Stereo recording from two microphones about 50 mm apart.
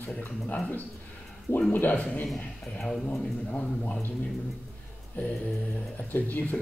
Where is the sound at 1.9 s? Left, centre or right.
Left.